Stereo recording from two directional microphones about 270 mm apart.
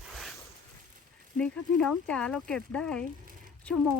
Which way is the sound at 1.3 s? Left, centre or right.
Centre.